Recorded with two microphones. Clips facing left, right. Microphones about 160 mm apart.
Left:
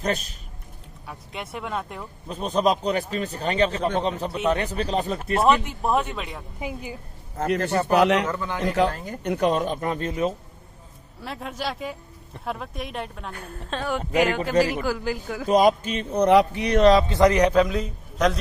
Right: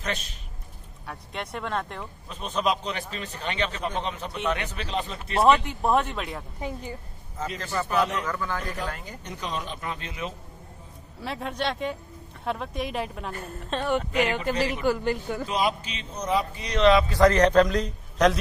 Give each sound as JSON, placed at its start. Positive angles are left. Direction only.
{"t": 0.0, "sound": "a man's voice", "side_deg": 40}
{"t": 1.0, "sound": "a woman's voice", "side_deg": 0}
{"t": 2.2, "sound": "a man's voice", "side_deg": 40}
{"t": 5.4, "sound": "a woman's voice", "side_deg": 0}
{"t": 7.3, "sound": "a man's voice", "side_deg": 65}
{"t": 7.9, "sound": "speech", "side_deg": 75}
{"t": 8.3, "sound": "a man's voice", "side_deg": 20}
{"t": 9.0, "sound": "a man's voice", "side_deg": 60}
{"t": 11.1, "sound": "a woman's voice", "side_deg": 0}
{"t": 15.4, "sound": "a man's voice", "side_deg": 45}
{"t": 17.1, "sound": "a woman's voice", "side_deg": 15}